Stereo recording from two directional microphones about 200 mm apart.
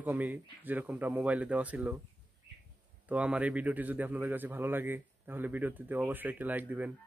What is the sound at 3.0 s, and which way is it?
A man's voice, 5° right (ahead or behind).